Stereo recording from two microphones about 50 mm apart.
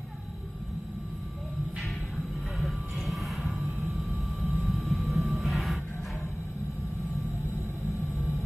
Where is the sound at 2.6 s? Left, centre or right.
Centre.